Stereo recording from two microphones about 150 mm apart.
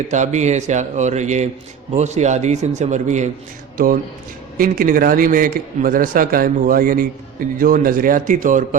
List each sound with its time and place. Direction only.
0.1 s speech: 50° right (ahead or behind)
4.5 s a man's voice: 70° right (ahead or behind)